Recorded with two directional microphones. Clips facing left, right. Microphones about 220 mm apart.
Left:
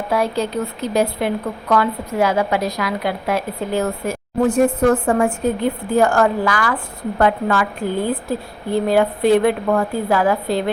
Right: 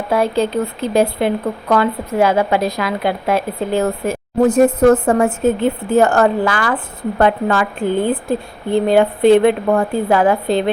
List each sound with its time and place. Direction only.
0.1 s a woman's voice: 25° right (ahead or behind)
4.4 s a woman's voice: 40° right (ahead or behind)
5.4 s a woman's voice: 25° right (ahead or behind)